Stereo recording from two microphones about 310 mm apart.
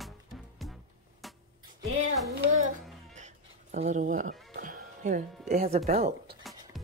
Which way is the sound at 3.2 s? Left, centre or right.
Right.